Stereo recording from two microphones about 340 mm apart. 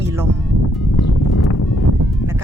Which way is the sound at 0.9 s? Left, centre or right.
Left.